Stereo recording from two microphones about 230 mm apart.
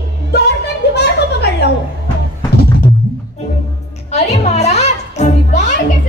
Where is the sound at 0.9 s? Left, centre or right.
Left.